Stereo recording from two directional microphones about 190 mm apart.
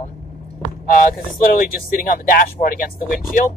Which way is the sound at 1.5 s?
50° left (ahead or behind).